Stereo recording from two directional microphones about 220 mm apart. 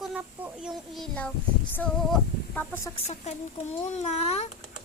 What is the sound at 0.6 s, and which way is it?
Child singing, centre (ahead or behind).